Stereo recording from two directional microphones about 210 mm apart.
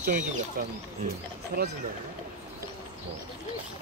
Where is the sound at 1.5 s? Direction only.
45° right (ahead or behind).